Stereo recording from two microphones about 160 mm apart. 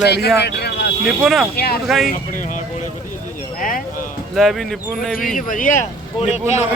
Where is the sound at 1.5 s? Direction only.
75° left (ahead or behind).